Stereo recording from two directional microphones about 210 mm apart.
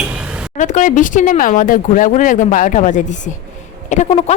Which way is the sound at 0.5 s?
35° left (ahead or behind).